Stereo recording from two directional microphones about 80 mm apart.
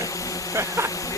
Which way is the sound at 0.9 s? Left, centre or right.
Left.